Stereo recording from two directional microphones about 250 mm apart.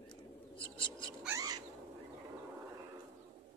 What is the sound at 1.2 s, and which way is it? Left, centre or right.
Bird, centre.